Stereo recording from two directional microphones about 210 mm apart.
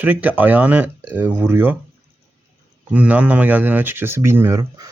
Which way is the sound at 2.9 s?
5° right (ahead or behind).